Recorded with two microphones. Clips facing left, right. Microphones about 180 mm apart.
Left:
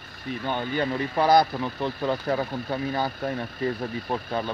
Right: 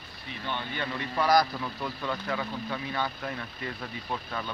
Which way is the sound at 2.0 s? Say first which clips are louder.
Left 7 dB; 40° left (ahead or behind).